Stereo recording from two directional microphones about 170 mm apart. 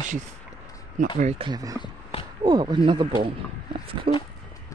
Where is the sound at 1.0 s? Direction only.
45° right (ahead or behind).